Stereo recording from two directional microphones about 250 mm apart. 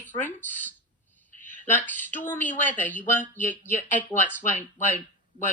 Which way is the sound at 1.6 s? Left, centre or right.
Centre.